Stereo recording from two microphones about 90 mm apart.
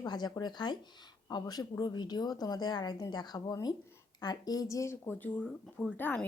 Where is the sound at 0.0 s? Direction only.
50° left (ahead or behind).